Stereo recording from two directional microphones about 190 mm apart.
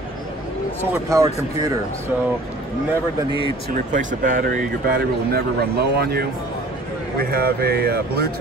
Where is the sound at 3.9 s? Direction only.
40° right (ahead or behind).